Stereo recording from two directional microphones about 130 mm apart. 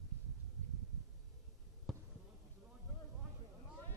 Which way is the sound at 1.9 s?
Centre (ahead or behind).